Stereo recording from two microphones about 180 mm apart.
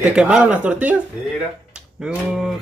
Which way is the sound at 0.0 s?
5° right (ahead or behind).